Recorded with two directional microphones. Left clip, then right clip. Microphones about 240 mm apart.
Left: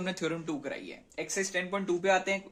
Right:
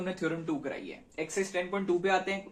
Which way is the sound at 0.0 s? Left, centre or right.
Left.